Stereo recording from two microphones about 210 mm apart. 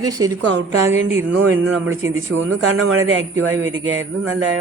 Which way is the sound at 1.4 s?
70° right (ahead or behind).